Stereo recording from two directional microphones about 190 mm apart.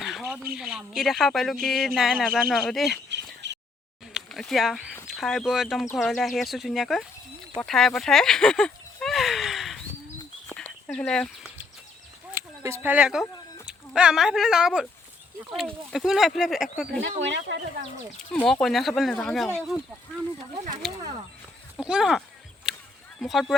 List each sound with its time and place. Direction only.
0.0 s bird: centre (ahead or behind)
0.5 s speech: 5° right (ahead or behind)
3.4 s a sound: 65° right (ahead or behind)
4.1 s a sound: centre (ahead or behind)
5.0 s speech: centre (ahead or behind)
7.6 s a sound: centre (ahead or behind)
12.3 s speech: 15° right (ahead or behind)
17.0 s speech: 75° right (ahead or behind)
18.3 s speech: 5° left (ahead or behind)
21.8 s speech: 5° right (ahead or behind)
22.7 s a sound: 5° right (ahead or behind)
23.2 s speech: centre (ahead or behind)